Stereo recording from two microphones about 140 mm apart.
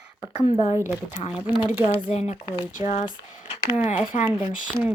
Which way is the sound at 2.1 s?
50° left (ahead or behind).